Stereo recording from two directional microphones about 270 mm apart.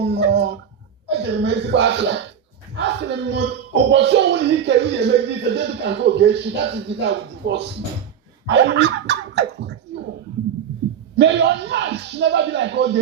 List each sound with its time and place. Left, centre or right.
0.0 s a sound: right
1.0 s speech: right
11.2 s speech: right